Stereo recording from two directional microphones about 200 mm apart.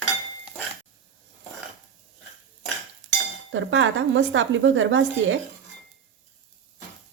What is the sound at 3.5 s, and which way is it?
Speech, 70° right (ahead or behind).